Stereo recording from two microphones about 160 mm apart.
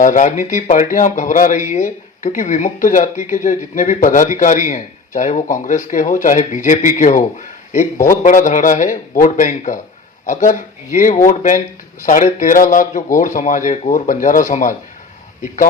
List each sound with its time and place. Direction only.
0.0 s speech: 55° left (ahead or behind)